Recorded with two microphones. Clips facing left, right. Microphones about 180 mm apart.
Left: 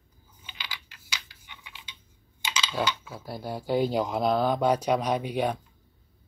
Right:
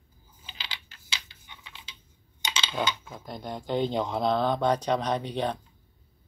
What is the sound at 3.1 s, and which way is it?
Speech, 5° left (ahead or behind).